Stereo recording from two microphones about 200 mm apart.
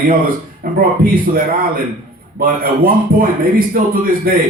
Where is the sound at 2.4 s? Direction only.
45° right (ahead or behind).